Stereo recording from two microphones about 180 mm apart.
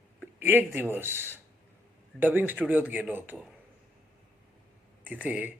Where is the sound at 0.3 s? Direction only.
10° right (ahead or behind).